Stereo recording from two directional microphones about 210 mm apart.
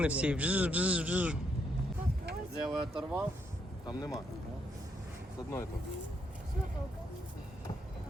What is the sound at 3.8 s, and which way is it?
Speech, 20° left (ahead or behind).